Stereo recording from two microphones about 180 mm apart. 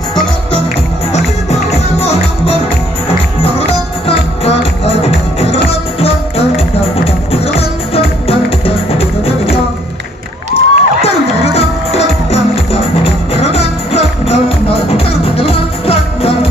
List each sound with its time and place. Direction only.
1.1 s music: 35° left (ahead or behind)
4.5 s music: 35° left (ahead or behind)